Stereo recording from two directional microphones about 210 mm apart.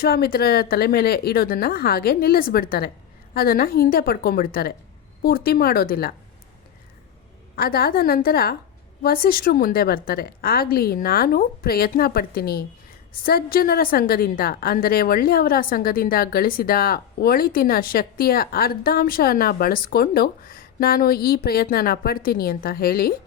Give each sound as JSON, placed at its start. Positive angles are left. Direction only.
{"t": 0.0, "sound": "a woman's voice", "side_deg": 45}
{"t": 7.5, "sound": "a woman's voice", "side_deg": 45}